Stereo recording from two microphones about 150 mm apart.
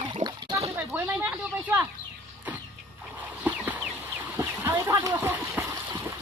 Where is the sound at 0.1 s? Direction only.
30° right (ahead or behind).